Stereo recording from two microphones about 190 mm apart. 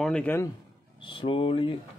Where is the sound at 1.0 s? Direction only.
25° left (ahead or behind).